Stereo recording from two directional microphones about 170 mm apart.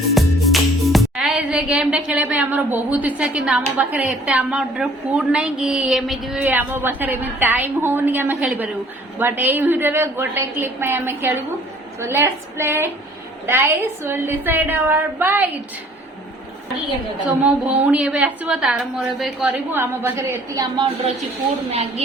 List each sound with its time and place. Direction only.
0.1 s music: centre (ahead or behind)
3.8 s a woman's voice: 10° right (ahead or behind)
17.2 s a woman's voice: 5° right (ahead or behind)
19.8 s a woman's voice: 15° right (ahead or behind)
21.7 s a woman's voice: 40° right (ahead or behind)